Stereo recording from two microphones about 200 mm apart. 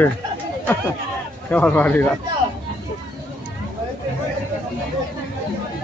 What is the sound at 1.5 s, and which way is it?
Speech, 5° left (ahead or behind).